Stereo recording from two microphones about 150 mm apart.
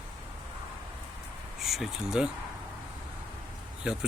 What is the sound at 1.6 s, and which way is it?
Speech, centre (ahead or behind).